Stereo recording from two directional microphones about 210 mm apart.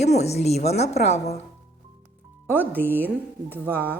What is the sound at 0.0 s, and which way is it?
A woman's voice, 30° left (ahead or behind).